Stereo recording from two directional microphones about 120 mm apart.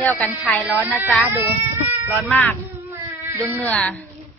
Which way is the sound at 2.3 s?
15° left (ahead or behind).